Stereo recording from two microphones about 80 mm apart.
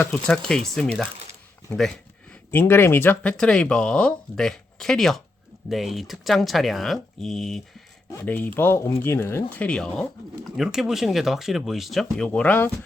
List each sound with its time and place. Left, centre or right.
0.3 s speech: centre
2.5 s speech: left
3.2 s speech: centre
8.2 s speech: left
10.4 s speech: centre
12.3 s speech: centre